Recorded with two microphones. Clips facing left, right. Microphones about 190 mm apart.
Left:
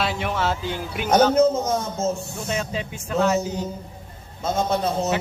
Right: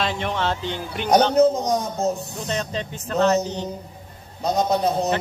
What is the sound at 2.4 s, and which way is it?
Speech, 5° left (ahead or behind).